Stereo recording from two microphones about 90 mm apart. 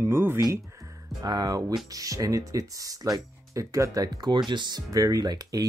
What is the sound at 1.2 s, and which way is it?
Speech, 50° right (ahead or behind).